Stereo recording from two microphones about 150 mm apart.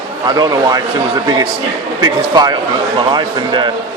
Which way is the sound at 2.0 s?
25° right (ahead or behind).